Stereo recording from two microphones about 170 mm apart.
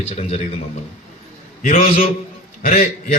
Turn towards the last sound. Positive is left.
turn(degrees=45)  # may be behind; listen again after turning